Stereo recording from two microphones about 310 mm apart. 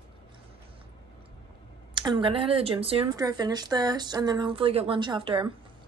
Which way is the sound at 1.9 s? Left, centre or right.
Centre.